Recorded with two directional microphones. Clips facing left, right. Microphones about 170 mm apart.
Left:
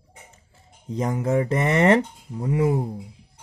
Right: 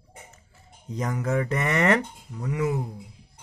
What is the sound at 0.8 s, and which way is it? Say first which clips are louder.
Speech: left 4 dB; 25° left (ahead or behind).